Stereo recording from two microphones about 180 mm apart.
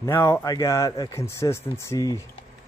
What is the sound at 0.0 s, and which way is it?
Speech, 15° left (ahead or behind).